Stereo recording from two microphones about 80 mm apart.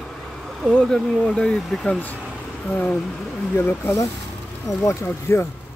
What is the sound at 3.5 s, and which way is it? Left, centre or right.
Speech, left.